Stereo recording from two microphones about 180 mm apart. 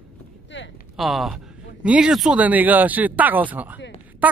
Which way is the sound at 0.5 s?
90° left.